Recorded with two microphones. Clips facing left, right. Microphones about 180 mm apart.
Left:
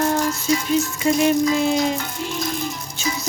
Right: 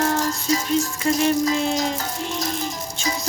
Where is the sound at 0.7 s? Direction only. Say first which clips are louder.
Left 2 dB; 5° left (ahead or behind).